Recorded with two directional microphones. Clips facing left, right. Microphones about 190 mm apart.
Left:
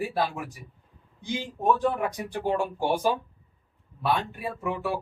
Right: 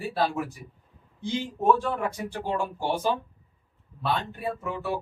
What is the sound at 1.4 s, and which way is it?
Speech, 15° left (ahead or behind).